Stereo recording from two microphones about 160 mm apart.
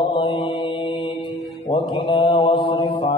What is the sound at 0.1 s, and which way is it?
Mantra, 30° left (ahead or behind).